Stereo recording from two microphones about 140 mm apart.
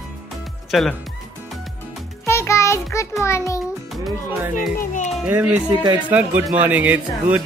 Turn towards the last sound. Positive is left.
turn(degrees=-10)  # may be behind; listen again after turning